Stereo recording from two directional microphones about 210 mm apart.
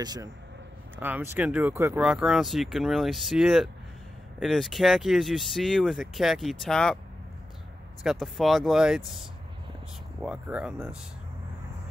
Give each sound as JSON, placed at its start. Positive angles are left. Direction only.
{"t": 0.0, "sound": "speech", "side_deg": -20}
{"t": 8.0, "sound": "speech", "side_deg": 0}
{"t": 10.2, "sound": "speech", "side_deg": -5}